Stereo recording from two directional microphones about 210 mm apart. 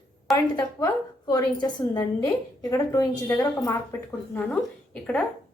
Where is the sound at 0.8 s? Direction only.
20° left (ahead or behind).